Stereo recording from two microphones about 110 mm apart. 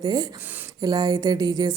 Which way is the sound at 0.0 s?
35° right (ahead or behind).